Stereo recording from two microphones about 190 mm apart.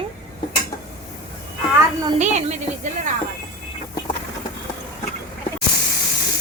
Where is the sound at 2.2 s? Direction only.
40° right (ahead or behind).